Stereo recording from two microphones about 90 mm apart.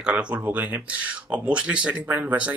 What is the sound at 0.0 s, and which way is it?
Speech, 10° right (ahead or behind).